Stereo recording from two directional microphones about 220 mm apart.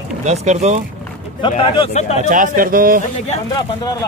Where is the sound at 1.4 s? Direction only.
25° left (ahead or behind).